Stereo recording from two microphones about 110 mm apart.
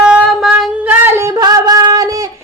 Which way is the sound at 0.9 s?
20° right (ahead or behind).